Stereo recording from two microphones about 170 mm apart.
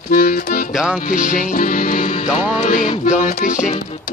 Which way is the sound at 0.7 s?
Centre (ahead or behind).